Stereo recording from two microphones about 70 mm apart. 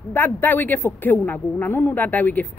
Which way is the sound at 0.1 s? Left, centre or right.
Left.